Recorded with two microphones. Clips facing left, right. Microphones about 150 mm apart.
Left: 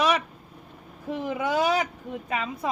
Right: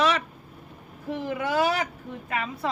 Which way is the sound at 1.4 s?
15° left (ahead or behind).